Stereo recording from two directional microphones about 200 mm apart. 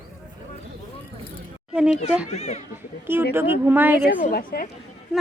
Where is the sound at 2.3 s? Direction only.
35° left (ahead or behind).